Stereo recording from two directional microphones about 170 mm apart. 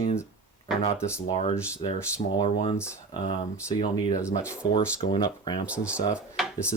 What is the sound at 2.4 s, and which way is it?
Speech, 45° left (ahead or behind).